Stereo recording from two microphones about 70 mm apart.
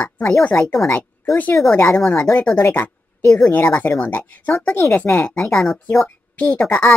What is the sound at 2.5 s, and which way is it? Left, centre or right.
A woman's voice, left.